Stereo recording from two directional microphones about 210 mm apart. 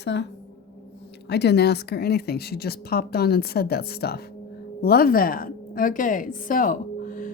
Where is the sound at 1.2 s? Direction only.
50° left (ahead or behind).